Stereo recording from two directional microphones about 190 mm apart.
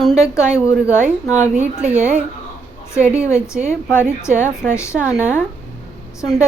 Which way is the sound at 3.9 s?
10° left (ahead or behind).